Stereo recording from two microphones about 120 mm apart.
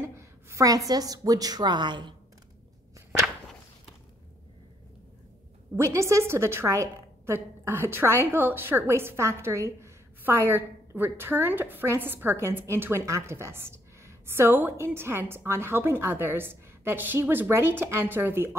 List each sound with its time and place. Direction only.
0.0 s a woman's voice: 25° right (ahead or behind); by 2.1 s 40° right (ahead or behind)
5.8 s a woman's voice: 25° right (ahead or behind)